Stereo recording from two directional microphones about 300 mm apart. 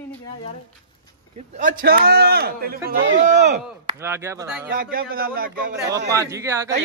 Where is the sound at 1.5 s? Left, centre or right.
Right.